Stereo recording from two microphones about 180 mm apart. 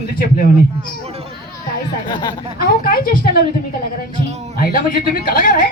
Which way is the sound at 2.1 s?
25° left (ahead or behind).